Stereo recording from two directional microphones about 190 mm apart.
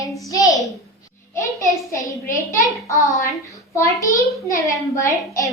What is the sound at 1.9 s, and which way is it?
A child's voice, 15° left (ahead or behind).